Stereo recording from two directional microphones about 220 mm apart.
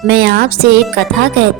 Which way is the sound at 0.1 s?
45° right (ahead or behind).